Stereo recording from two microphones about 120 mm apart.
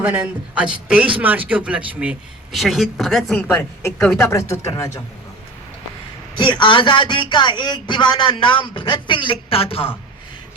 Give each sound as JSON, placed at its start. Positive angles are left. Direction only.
{"t": 0.0, "sound": "speech", "side_deg": -15}
{"t": 2.5, "sound": "speech", "side_deg": 0}
{"t": 3.3, "sound": "speech", "side_deg": 15}
{"t": 6.4, "sound": "speech", "side_deg": 40}